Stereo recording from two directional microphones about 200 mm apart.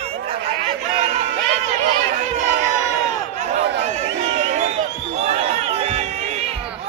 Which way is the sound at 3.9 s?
35° right (ahead or behind).